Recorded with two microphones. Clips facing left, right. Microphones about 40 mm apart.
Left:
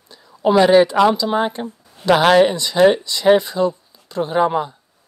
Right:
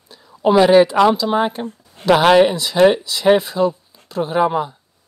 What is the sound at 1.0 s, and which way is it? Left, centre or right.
Speech, centre.